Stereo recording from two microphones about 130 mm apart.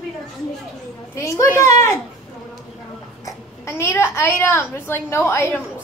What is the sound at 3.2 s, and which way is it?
A child's voice, 20° left (ahead or behind).